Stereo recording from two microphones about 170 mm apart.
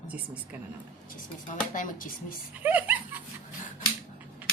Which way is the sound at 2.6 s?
10° right (ahead or behind).